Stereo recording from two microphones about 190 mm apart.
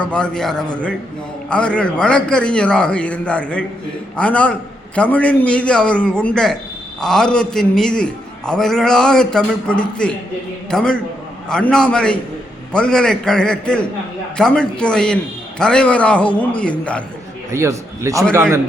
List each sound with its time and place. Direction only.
0.0 s a man's voice: 5° left (ahead or behind)
17.5 s a man's voice: 15° right (ahead or behind)